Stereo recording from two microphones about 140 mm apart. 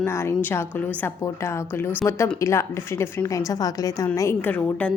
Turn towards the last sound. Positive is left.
turn(degrees=10)  # may be behind; listen again after turning